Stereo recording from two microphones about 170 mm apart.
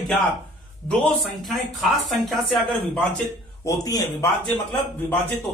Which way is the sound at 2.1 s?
Centre (ahead or behind).